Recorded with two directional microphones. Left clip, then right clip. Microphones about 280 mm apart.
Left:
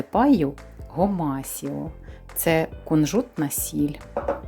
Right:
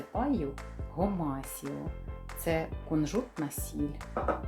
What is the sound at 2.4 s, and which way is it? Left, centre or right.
Speech, left.